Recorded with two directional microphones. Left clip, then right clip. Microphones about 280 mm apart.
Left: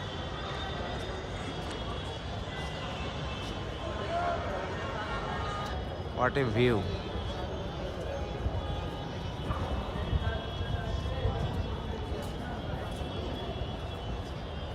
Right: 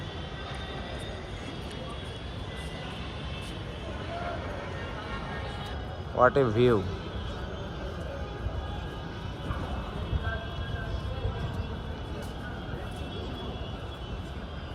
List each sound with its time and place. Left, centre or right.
6.1 s speech: centre